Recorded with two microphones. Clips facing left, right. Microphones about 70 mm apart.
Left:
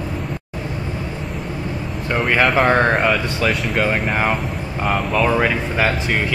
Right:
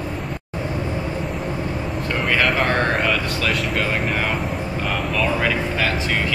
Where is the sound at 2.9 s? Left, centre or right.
Centre.